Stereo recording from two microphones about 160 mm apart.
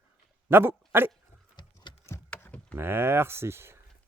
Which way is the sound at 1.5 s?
30° left (ahead or behind).